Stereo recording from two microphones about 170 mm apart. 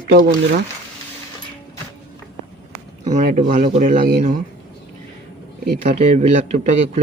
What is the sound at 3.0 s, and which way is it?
Speech, 45° right (ahead or behind).